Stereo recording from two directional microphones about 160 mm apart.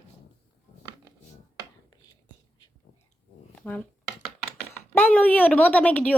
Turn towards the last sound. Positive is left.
turn(degrees=10)  # may be behind; listen again after turning